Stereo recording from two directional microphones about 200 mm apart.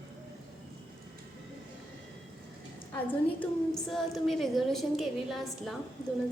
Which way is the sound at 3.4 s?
Centre (ahead or behind).